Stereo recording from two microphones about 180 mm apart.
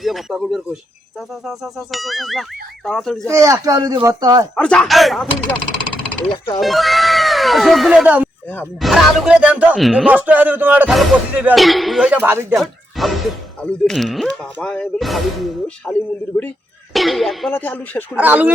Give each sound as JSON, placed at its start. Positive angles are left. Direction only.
{"t": 0.0, "sound": "speech", "side_deg": 0}
{"t": 3.2, "sound": "speech", "side_deg": -15}
{"t": 4.5, "sound": "speech", "side_deg": 5}
{"t": 6.6, "sound": "speech", "side_deg": 0}
{"t": 12.1, "sound": "speech", "side_deg": -10}
{"t": 12.5, "sound": "speech", "side_deg": 0}
{"t": 18.1, "sound": "speech", "side_deg": -10}